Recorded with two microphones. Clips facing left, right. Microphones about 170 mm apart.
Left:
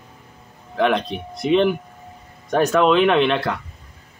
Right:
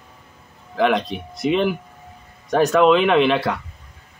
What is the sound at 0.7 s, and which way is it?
Speech, centre (ahead or behind).